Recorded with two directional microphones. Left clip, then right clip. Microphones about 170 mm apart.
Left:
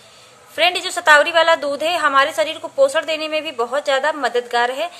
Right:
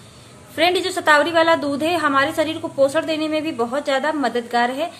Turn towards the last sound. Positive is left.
turn(degrees=25)  # may be behind; listen again after turning